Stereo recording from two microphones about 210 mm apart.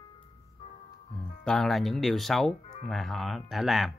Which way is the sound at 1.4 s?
Centre (ahead or behind).